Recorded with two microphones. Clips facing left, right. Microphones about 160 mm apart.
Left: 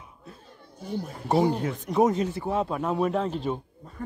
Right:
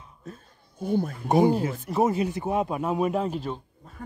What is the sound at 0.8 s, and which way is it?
Speech, 55° right (ahead or behind).